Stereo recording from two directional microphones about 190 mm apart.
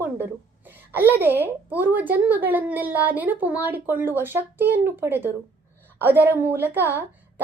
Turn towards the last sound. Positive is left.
turn(degrees=-10)  # may be behind; listen again after turning